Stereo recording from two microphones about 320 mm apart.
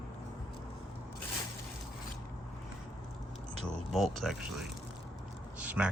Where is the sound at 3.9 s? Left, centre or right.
Centre.